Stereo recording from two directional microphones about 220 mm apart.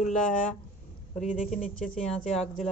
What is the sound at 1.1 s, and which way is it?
Speech, 35° left (ahead or behind).